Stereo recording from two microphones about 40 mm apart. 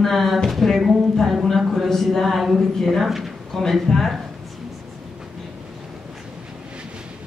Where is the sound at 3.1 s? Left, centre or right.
Centre.